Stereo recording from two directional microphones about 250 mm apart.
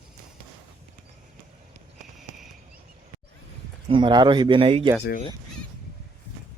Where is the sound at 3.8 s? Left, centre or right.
Centre.